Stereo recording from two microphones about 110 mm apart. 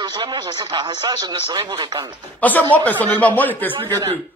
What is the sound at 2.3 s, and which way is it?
Speech, 15° left (ahead or behind).